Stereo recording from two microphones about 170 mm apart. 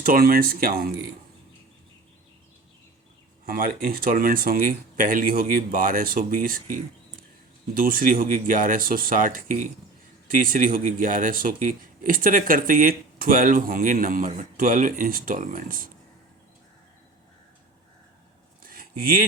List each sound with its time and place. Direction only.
0.0 s speech: 60° right (ahead or behind)
3.4 s speech: 55° right (ahead or behind)
18.6 s a sound: 60° right (ahead or behind)